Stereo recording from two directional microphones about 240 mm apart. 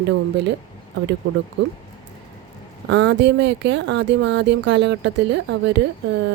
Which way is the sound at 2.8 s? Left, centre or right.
Right.